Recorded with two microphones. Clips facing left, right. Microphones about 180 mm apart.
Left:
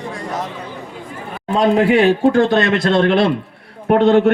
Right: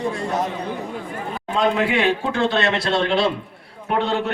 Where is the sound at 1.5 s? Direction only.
40° left (ahead or behind).